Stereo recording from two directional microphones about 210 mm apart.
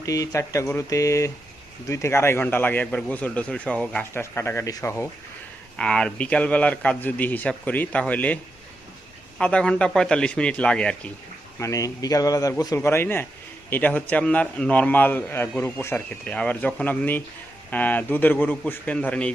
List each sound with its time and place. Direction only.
0.0 s a man's voice: 15° left (ahead or behind)
9.4 s a man's voice: 5° left (ahead or behind)
11.6 s a man's voice: 15° left (ahead or behind)